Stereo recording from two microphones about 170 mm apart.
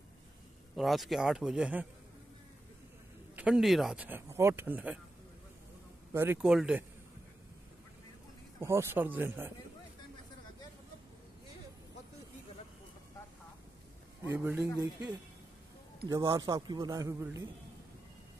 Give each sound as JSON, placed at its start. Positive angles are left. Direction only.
{"t": 0.7, "sound": "speech", "side_deg": 0}
{"t": 3.3, "sound": "speech", "side_deg": -5}
{"t": 6.1, "sound": "speech", "side_deg": -15}
{"t": 6.4, "sound": "speech", "side_deg": -5}
{"t": 8.5, "sound": "speech", "side_deg": -15}
{"t": 14.3, "sound": "speech", "side_deg": -10}
{"t": 16.1, "sound": "a man's voice", "side_deg": -20}